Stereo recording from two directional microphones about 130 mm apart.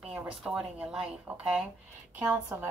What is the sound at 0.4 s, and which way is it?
A woman's voice, 5° right (ahead or behind).